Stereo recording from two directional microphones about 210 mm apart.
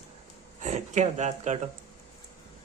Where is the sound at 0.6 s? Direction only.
35° right (ahead or behind).